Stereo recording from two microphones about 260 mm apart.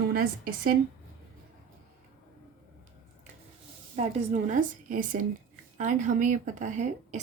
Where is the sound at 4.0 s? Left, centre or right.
Right.